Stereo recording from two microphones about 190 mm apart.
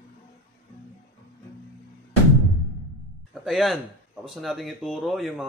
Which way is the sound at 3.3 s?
Centre (ahead or behind).